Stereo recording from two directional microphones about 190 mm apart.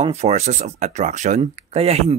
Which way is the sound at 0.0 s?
35° right (ahead or behind).